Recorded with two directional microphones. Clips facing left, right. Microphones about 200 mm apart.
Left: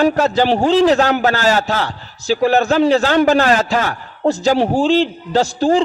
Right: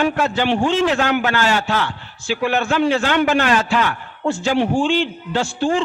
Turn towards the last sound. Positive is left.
turn(degrees=40)  # may be behind; listen again after turning